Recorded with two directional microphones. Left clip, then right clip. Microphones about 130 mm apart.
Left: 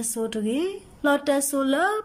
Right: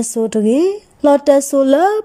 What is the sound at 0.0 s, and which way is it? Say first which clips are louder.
Speech: right 12 dB; 45° right (ahead or behind).